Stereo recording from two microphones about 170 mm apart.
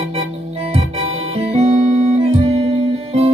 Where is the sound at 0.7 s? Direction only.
40° right (ahead or behind).